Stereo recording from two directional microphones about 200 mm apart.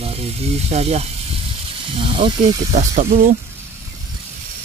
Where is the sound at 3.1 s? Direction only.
45° right (ahead or behind).